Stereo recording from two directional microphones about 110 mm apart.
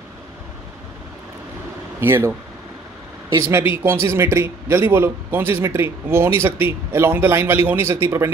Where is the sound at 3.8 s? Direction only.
25° right (ahead or behind).